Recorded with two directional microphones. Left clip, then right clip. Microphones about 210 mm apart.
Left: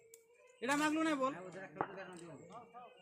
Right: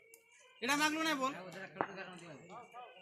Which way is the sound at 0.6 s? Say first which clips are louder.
Right 1 dB; 40° right (ahead or behind).